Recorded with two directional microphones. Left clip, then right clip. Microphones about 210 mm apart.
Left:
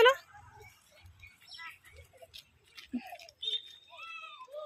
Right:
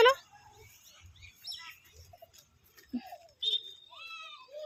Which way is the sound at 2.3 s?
Centre (ahead or behind).